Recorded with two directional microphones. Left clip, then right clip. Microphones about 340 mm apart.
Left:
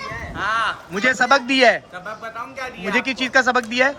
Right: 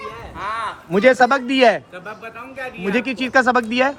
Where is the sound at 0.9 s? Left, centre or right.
Centre.